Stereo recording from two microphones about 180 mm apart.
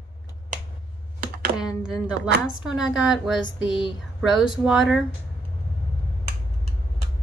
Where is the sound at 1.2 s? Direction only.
55° right (ahead or behind).